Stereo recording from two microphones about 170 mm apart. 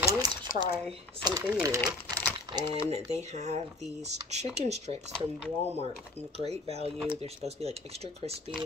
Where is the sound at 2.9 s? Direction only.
40° right (ahead or behind).